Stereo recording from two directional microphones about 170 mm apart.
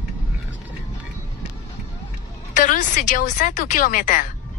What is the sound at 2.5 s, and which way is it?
A woman's voice, 50° left (ahead or behind).